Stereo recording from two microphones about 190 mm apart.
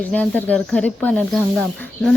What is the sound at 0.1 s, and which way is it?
Speech, 10° left (ahead or behind).